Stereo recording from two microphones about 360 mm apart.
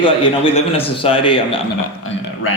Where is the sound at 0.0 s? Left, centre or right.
Centre.